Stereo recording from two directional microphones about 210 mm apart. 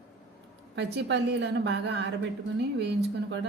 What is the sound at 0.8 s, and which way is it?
Speech, 55° right (ahead or behind).